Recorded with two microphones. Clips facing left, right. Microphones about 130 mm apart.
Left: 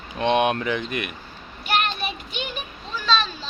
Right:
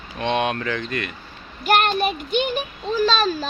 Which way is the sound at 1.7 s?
45° right (ahead or behind).